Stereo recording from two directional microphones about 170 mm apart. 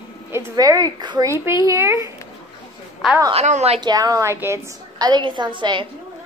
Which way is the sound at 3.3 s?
40° right (ahead or behind).